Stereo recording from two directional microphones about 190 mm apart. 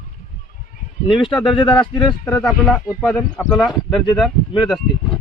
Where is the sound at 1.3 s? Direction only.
Centre (ahead or behind).